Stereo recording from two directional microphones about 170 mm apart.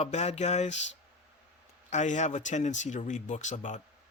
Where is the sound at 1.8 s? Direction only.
45° left (ahead or behind).